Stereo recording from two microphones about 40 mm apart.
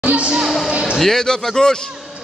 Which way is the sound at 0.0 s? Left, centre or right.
Right.